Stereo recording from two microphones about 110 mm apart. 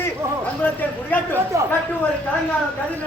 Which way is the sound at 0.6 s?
15° left (ahead or behind).